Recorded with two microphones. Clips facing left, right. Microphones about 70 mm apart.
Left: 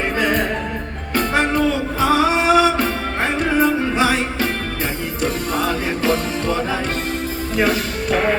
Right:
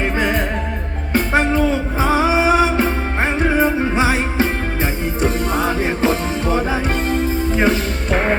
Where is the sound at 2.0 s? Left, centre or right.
Left.